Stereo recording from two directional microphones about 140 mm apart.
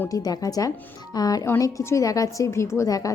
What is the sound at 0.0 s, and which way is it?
A woman's voice, 25° left (ahead or behind).